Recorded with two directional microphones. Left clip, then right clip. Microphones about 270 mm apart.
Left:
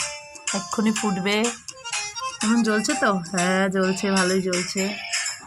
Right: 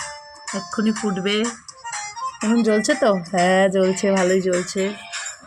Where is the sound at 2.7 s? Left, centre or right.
Centre.